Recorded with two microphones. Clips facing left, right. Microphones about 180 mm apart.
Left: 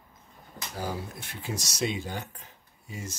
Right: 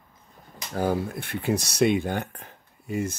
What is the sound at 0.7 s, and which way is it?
Speech, 55° right (ahead or behind).